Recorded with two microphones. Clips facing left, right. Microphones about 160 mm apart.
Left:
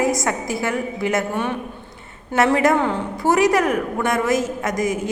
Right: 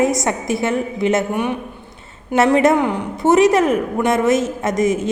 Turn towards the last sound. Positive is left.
turn(degrees=-25)  # may be behind; listen again after turning